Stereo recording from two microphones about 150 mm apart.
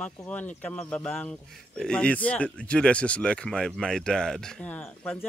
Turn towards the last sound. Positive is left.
turn(degrees=10)  # may be behind; listen again after turning